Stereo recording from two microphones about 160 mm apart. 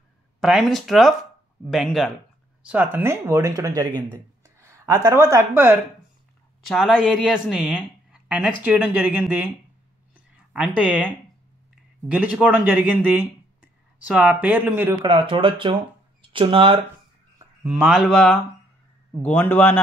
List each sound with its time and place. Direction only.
0.4 s speech: centre (ahead or behind); by 3.9 s 20° right (ahead or behind)
4.6 s a sound: 15° right (ahead or behind)
5.0 s speech: 20° right (ahead or behind)
6.7 s speech: centre (ahead or behind)
10.5 s speech: 10° right (ahead or behind)
12.1 s speech: 10° right (ahead or behind)
15.0 s speech: 35° right (ahead or behind)
17.6 s a man's voice: 10° right (ahead or behind); by 19.8 s 10° left (ahead or behind)